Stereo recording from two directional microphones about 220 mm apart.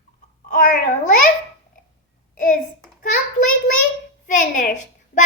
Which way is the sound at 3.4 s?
75° left (ahead or behind).